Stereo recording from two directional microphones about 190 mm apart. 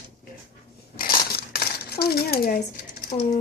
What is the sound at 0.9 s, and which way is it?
Coin, 55° left (ahead or behind).